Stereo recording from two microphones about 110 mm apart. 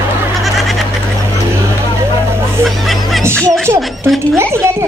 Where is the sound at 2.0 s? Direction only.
25° right (ahead or behind).